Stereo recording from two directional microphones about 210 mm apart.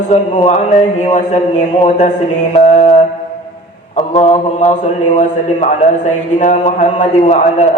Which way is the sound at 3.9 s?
35° left (ahead or behind).